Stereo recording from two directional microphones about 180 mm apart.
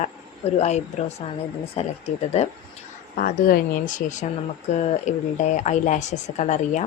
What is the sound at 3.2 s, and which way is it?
Speech, 55° left (ahead or behind).